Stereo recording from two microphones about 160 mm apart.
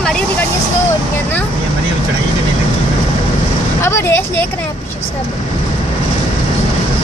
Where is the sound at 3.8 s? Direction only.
15° left (ahead or behind).